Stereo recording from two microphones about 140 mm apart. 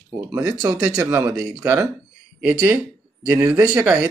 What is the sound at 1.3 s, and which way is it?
Speech, 5° right (ahead or behind).